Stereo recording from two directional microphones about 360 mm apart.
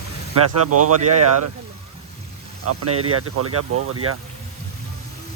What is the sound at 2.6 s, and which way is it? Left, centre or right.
Speech, right.